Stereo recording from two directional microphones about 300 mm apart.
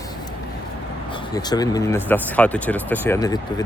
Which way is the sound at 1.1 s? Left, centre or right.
Centre.